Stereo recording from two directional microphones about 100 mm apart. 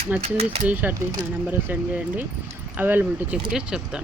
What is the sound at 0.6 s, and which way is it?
Speech, 15° right (ahead or behind).